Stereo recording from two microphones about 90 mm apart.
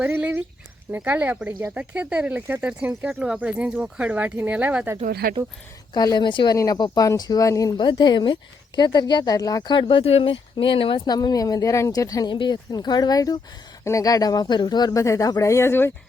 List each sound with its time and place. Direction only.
0.0 s a sound: 20° right (ahead or behind)
0.9 s speech: 20° right (ahead or behind)
5.9 s speech: 50° left (ahead or behind)
6.5 s speech: 45° left (ahead or behind)
7.8 s speech: 55° left (ahead or behind)
9.7 s speech: 85° left
11.0 s speech: 50° left (ahead or behind)
12.3 s speech: 60° left (ahead or behind); by 15.9 s 30° left (ahead or behind)